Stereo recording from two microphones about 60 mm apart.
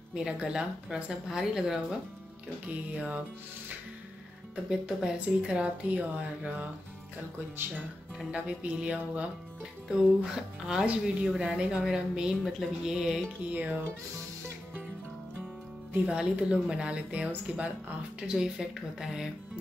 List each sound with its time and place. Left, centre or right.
0.1 s speech: centre
2.9 s speech: right
4.6 s speech: centre
5.9 s speech: right
8.3 s speech: centre
13.5 s speech: right
16.1 s speech: centre
18.2 s speech: centre